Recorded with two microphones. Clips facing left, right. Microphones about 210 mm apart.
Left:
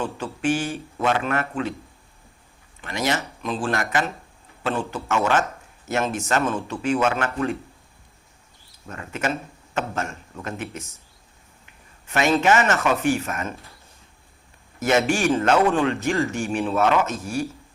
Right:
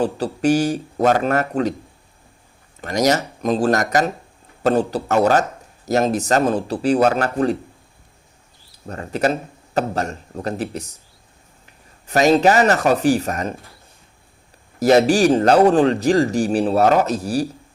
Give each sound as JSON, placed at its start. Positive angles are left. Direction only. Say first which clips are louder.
{"t": 0.0, "sound": "speech", "louder": "right 7 dB", "side_deg": -40}
{"t": 2.8, "sound": "speech", "louder": "right 7 dB", "side_deg": -40}
{"t": 8.9, "sound": "speech", "louder": "right 7 dB", "side_deg": -35}
{"t": 14.8, "sound": "speech", "louder": "right 7 dB", "side_deg": -35}